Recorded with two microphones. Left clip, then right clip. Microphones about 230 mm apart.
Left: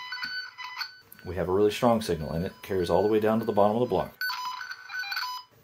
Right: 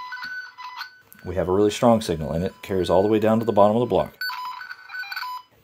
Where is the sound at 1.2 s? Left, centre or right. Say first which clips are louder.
Right 4 dB; right.